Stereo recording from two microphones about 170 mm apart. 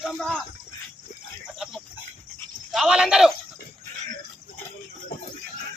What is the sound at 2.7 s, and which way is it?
Speech, 5° right (ahead or behind).